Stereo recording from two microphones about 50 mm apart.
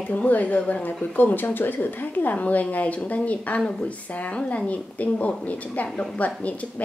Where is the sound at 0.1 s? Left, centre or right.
Left.